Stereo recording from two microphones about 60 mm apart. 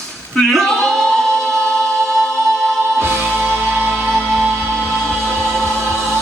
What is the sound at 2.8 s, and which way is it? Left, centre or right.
Music, right.